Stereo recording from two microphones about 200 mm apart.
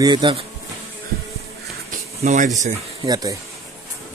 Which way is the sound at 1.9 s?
40° right (ahead or behind).